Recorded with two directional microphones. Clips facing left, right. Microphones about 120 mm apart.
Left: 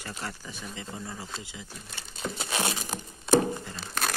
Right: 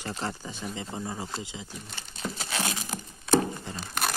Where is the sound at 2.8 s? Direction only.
15° left (ahead or behind).